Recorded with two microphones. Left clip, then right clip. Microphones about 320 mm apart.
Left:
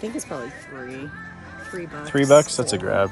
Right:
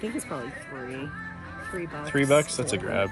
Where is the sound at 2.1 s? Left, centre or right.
Centre.